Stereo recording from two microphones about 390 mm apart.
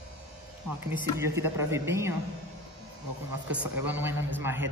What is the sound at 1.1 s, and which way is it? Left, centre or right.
Speech, centre.